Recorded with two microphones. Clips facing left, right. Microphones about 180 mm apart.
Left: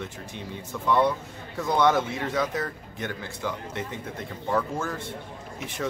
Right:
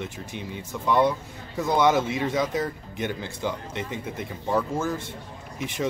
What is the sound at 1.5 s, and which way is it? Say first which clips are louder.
Speech: right 1 dB; 5° right (ahead or behind).